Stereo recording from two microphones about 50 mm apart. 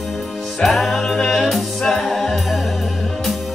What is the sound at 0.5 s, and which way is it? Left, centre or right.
Music, centre.